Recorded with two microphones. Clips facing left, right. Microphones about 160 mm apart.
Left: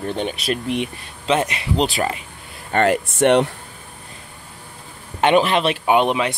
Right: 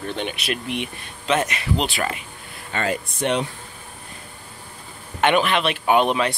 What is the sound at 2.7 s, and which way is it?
Speech, 70° left (ahead or behind).